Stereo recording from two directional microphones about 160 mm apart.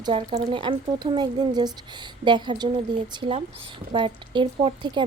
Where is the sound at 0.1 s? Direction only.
40° right (ahead or behind).